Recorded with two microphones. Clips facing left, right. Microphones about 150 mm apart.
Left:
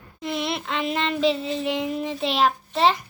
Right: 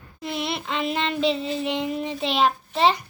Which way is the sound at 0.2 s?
Centre (ahead or behind).